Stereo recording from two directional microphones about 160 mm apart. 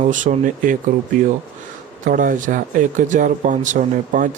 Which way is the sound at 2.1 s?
60° right (ahead or behind).